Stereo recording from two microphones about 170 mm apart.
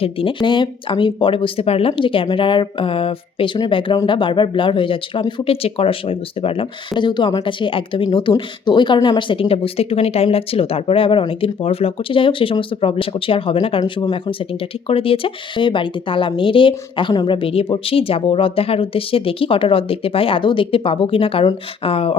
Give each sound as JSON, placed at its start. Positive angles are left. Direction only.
{"t": 0.0, "sound": "speech", "side_deg": 30}